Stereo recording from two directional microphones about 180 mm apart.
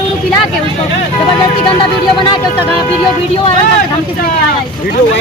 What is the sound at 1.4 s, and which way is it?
Speech, 25° left (ahead or behind).